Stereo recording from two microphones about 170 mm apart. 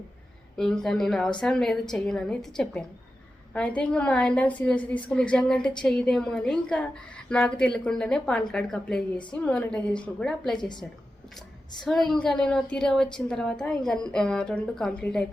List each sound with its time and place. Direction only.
0.5 s a woman's voice: 5° left (ahead or behind)
10.6 s a woman's voice: 25° left (ahead or behind)
11.9 s a woman's voice: centre (ahead or behind)